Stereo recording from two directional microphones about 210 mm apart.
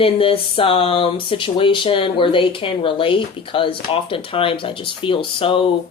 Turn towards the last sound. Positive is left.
turn(degrees=25)  # may be behind; listen again after turning